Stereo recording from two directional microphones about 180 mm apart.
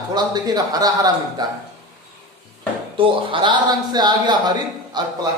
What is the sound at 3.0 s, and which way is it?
Speech, 30° right (ahead or behind).